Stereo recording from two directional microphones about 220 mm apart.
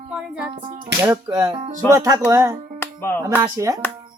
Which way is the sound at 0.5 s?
25° right (ahead or behind).